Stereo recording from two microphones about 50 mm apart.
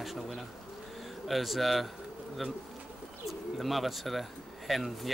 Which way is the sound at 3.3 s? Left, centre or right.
Centre.